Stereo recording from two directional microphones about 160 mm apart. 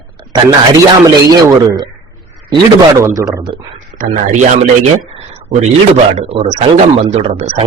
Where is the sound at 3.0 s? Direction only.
20° right (ahead or behind).